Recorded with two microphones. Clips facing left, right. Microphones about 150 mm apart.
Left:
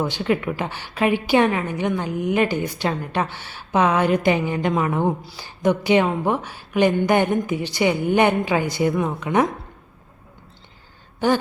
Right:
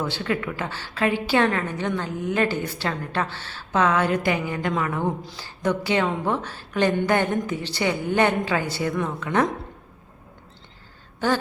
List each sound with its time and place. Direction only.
0.0 s a woman's voice: 20° left (ahead or behind)